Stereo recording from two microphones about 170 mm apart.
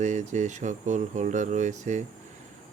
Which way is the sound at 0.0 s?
45° right (ahead or behind).